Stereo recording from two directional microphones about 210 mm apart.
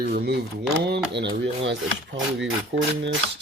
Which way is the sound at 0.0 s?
50° right (ahead or behind).